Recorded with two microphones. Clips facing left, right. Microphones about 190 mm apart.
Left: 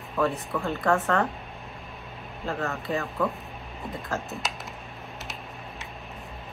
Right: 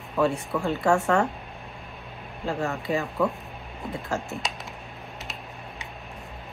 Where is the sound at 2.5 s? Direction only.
15° right (ahead or behind).